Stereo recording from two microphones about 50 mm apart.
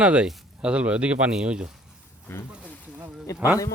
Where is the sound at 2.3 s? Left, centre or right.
Left.